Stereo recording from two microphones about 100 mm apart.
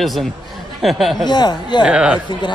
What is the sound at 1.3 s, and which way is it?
Speech, 45° left (ahead or behind).